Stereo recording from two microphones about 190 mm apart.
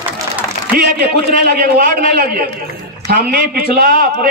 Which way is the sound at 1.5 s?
50° right (ahead or behind).